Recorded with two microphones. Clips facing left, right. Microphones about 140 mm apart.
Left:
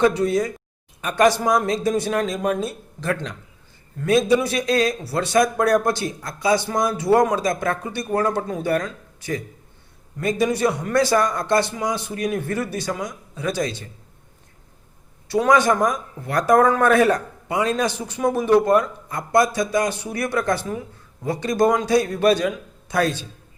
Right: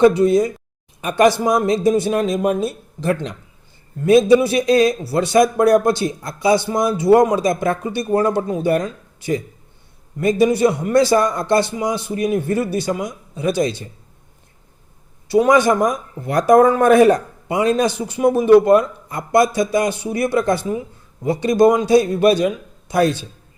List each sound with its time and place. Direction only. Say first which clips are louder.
0.2 s speech: right 6 dB; 15° right (ahead or behind)
15.3 s speech: right 4 dB; 15° right (ahead or behind)
20.1 s speech: right 5 dB; 25° right (ahead or behind)